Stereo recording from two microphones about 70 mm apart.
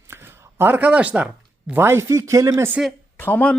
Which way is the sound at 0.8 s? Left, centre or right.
Centre.